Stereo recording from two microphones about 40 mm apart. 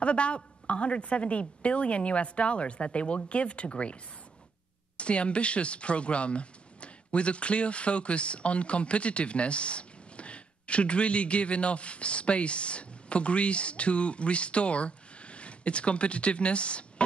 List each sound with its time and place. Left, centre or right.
0.0 s a woman's voice: left